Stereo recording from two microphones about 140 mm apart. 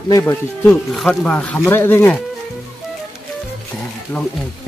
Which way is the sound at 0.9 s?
5° left (ahead or behind).